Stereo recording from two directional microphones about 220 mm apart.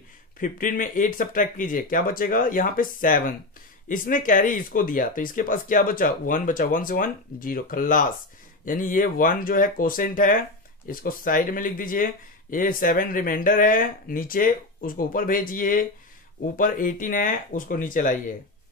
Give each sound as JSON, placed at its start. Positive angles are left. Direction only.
{"t": 0.4, "sound": "speech", "side_deg": 40}